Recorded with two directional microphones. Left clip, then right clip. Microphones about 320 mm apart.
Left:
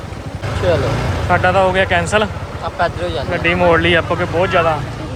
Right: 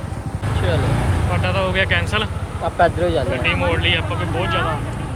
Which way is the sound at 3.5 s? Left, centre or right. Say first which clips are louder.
Left 8 dB; left.